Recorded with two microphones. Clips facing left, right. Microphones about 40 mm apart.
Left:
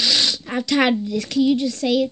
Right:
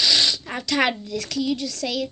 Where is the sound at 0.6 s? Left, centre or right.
Centre.